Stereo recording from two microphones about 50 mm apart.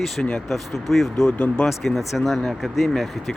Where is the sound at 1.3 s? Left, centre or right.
Left.